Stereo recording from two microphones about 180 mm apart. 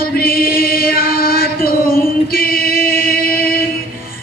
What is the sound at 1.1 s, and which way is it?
Music, 55° left (ahead or behind).